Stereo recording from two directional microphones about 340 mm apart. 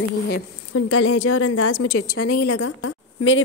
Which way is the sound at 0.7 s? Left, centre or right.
Left.